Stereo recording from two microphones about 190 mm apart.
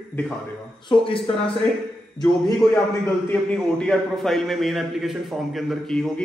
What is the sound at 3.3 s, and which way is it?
A man's voice, 5° left (ahead or behind).